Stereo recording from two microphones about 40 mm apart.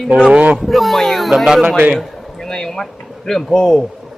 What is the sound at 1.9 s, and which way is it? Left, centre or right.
Speech, centre.